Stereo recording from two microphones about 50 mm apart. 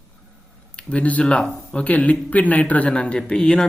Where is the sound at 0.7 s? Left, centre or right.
Left.